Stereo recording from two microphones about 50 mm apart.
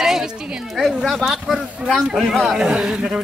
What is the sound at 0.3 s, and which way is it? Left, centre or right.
Speech, centre.